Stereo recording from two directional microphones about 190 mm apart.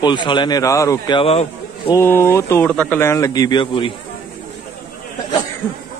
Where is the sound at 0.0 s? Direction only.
25° left (ahead or behind).